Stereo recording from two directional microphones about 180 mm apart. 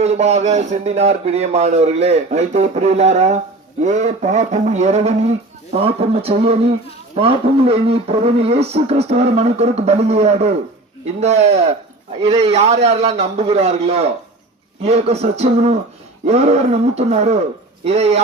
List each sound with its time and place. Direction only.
0.0 s speech: 35° right (ahead or behind)